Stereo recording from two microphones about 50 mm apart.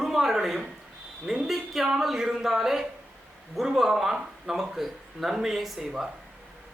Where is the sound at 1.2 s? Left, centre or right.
Centre.